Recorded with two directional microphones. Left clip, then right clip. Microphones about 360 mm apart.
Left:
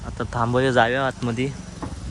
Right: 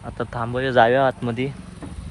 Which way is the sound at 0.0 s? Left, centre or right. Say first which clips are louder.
Left 2 dB; centre.